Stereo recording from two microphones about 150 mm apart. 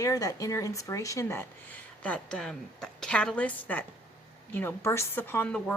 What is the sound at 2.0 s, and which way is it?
A woman's voice, 5° left (ahead or behind).